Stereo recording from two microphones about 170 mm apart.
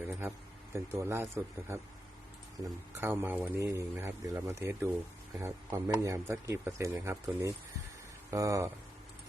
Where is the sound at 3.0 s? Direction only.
15° right (ahead or behind).